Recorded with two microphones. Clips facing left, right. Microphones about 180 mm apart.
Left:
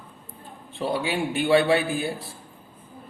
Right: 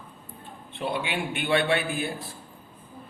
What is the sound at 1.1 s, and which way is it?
A man's voice, 35° left (ahead or behind).